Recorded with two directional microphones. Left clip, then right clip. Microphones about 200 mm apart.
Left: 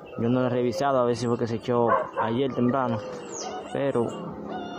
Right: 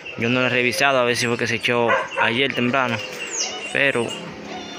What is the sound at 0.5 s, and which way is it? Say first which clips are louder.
Speech: right 6 dB; centre (ahead or behind).